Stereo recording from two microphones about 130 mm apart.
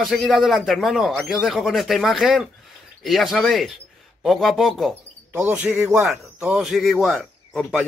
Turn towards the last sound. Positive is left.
turn(degrees=0)  # may be behind; listen again after turning